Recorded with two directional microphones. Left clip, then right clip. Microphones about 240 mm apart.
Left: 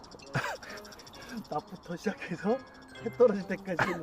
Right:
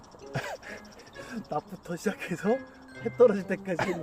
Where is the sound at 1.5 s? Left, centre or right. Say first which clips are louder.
Right 3 dB; right.